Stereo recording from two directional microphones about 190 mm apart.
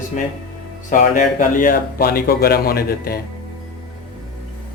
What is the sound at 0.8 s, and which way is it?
Speech, 40° left (ahead or behind).